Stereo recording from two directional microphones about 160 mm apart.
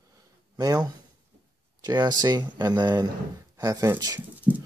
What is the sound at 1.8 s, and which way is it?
Speech, 25° right (ahead or behind).